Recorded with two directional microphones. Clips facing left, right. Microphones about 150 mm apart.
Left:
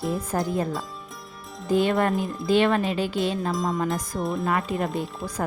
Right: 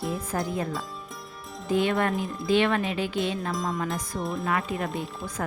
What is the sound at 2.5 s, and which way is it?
Speech, 40° left (ahead or behind).